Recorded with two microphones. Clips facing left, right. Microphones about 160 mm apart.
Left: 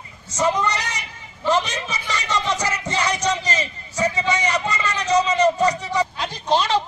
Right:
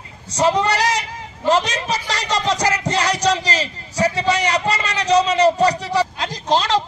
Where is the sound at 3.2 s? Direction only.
80° right.